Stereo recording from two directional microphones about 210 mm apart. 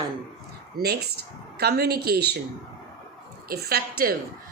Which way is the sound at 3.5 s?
45° right (ahead or behind).